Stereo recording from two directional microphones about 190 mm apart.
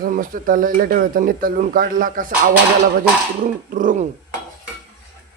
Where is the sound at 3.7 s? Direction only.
45° right (ahead or behind).